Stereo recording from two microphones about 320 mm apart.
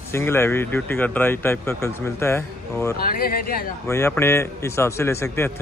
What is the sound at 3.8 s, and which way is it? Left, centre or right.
Speech, centre.